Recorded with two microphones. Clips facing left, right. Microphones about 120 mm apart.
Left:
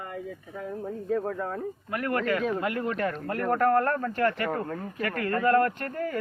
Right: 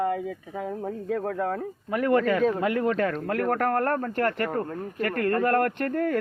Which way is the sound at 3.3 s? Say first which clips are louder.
Left 4 dB; 80° right.